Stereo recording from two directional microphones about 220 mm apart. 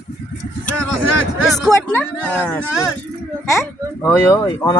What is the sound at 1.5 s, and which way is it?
A woman's voice, centre (ahead or behind).